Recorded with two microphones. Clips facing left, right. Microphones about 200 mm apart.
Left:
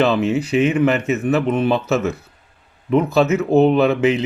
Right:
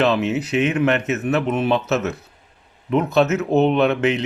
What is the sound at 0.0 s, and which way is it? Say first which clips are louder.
Speech: left 2 dB; centre (ahead or behind).